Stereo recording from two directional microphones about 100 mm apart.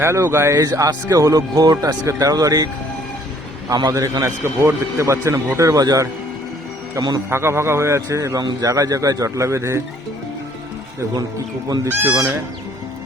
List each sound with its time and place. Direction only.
0.0 s a man's voice: 25° right (ahead or behind)
3.7 s a man's voice: 40° right (ahead or behind)
4.0 s a man's voice: 30° right (ahead or behind)
7.3 s a man's voice: 25° right (ahead or behind)
11.9 s speech: 20° right (ahead or behind)